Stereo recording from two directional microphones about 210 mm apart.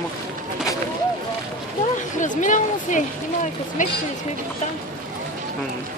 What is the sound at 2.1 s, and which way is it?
A woman's voice, 35° left (ahead or behind).